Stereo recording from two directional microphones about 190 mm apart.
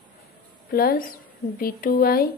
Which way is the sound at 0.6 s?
50° left (ahead or behind).